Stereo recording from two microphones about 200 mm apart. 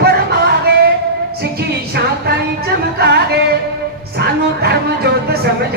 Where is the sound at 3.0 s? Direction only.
55° right (ahead or behind).